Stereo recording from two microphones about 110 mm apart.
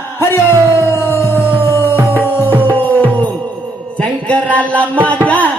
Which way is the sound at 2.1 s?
15° right (ahead or behind).